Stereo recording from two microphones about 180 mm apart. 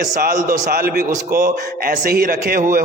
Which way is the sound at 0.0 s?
50° right (ahead or behind).